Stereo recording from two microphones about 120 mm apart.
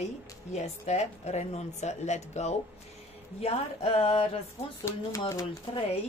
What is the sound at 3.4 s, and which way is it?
Speech, 55° left (ahead or behind).